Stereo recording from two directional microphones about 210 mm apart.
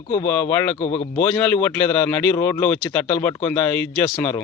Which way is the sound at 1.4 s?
5° left (ahead or behind).